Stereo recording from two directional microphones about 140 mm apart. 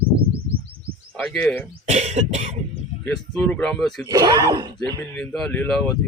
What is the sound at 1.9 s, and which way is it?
Cough, 55° right (ahead or behind).